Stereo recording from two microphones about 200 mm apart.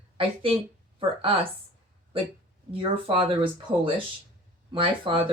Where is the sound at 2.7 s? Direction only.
25° right (ahead or behind).